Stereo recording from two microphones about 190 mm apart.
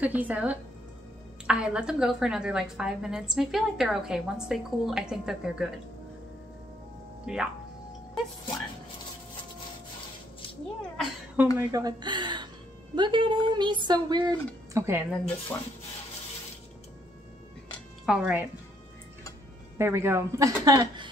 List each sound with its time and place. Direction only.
0.0 s a woman's voice: 10° right (ahead or behind)
7.3 s a woman's voice: 5° right (ahead or behind)
11.0 s a sound: centre (ahead or behind)
11.5 s speech: 20° right (ahead or behind)
15.0 s a woman's voice: 5° left (ahead or behind)
18.0 s a woman's voice: 5° right (ahead or behind)
19.8 s a woman's voice: 15° right (ahead or behind)